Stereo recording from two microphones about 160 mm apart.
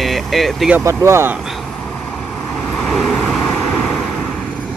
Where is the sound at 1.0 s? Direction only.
15° right (ahead or behind).